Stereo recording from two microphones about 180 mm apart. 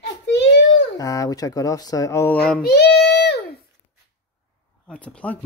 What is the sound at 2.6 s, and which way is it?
Child singing, 65° left (ahead or behind).